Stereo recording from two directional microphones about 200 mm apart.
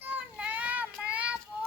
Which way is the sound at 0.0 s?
10° right (ahead or behind).